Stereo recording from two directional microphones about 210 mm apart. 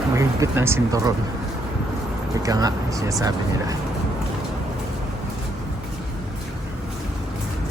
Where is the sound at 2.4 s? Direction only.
15° right (ahead or behind).